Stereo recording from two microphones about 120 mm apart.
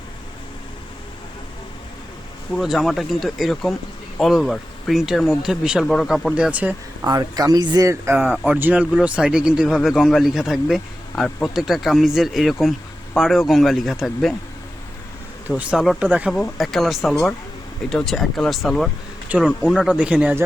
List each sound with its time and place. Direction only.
2.6 s speech: centre (ahead or behind)
6.3 s speech: 10° right (ahead or behind)
7.1 s speech: 30° right (ahead or behind); by 14.3 s centre (ahead or behind)
15.4 s speech: 10° right (ahead or behind)